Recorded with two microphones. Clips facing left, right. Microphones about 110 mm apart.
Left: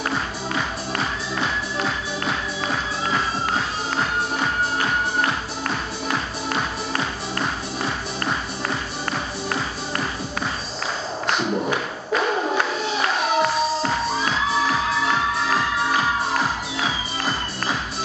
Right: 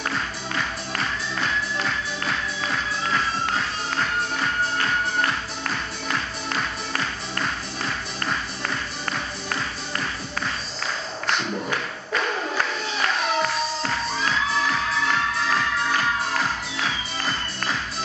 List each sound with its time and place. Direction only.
0.6 s music: 5° left (ahead or behind)
3.2 s music: 30° left (ahead or behind)
4.7 s music: 10° left (ahead or behind)
6.0 s music: 30° left (ahead or behind)
11.5 s a sound: 25° left (ahead or behind)
12.2 s music: 20° left (ahead or behind)
15.5 s music: 5° left (ahead or behind)